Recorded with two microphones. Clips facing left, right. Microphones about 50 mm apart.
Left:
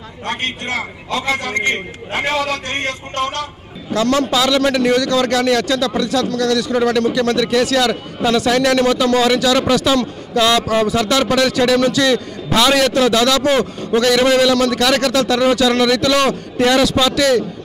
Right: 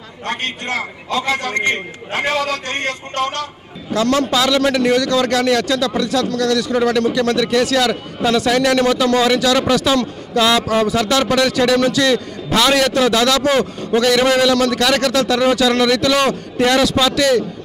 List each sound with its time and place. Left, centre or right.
1.2 s a man's voice: centre
2.3 s a man's voice: left
2.6 s a man's voice: centre
3.9 s a man's voice: centre